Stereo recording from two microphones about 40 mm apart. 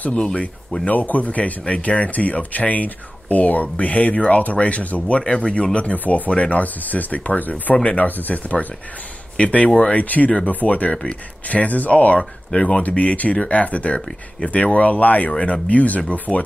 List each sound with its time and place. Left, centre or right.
0.8 s speech: left
5.2 s speech: left
5.9 s speech: left
7.7 s speech: left
8.1 s speech: left
9.4 s speech: left
10.0 s speech: left
12.2 s speech: left
15.3 s speech: left